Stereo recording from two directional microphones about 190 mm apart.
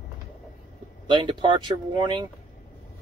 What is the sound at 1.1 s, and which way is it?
Speech, 25° right (ahead or behind).